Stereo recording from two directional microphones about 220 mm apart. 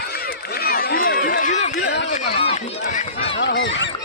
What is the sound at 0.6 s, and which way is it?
Run, 40° left (ahead or behind).